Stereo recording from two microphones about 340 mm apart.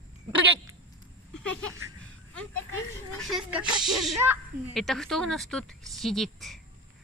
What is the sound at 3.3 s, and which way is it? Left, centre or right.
Speech, centre.